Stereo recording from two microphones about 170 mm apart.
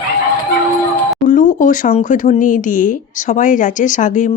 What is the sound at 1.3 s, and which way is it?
Speech, 50° left (ahead or behind).